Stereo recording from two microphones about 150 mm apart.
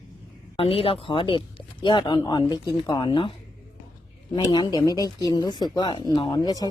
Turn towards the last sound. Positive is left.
turn(degrees=25)  # may be behind; listen again after turning